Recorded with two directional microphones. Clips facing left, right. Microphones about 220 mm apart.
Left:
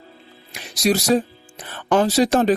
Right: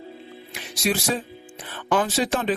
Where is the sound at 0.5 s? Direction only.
40° left (ahead or behind).